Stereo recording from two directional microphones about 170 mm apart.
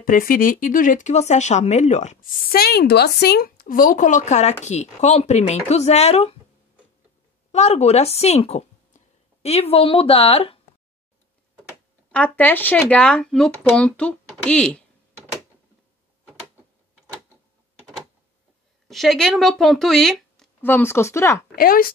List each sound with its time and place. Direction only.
0.0 s speech: 55° left (ahead or behind)
2.5 s speech: 65° left (ahead or behind); by 6.3 s 40° left (ahead or behind)
7.5 s speech: 40° left (ahead or behind)
12.1 s speech: 10° left (ahead or behind)
18.9 s speech: centre (ahead or behind)
21.5 s speech: 60° left (ahead or behind)